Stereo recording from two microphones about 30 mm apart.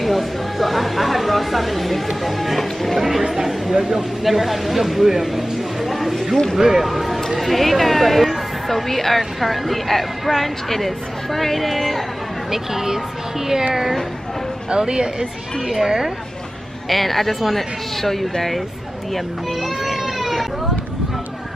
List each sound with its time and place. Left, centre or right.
0.0 s speech: centre
2.2 s music: centre
3.0 s chatter: centre
3.6 s speech: right
4.2 s speech: centre
6.6 s speech: centre
6.9 s speech: centre
12.4 s speech: centre
14.7 s speech: right
16.9 s speech: centre
19.1 s baby cry: centre